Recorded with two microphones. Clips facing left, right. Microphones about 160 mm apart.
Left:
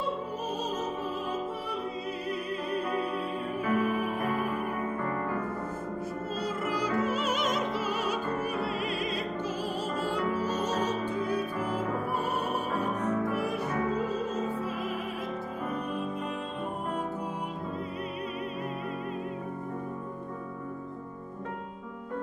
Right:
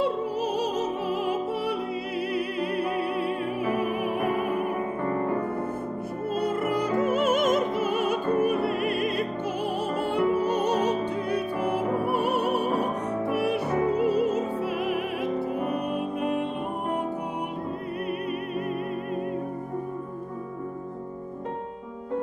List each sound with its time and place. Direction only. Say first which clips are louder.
0.0 s music: right 7 dB; 80° right
6.3 s music: right 7 dB; 55° right (ahead or behind)